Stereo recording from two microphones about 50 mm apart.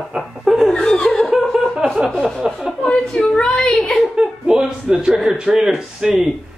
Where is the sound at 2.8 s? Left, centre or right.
Centre.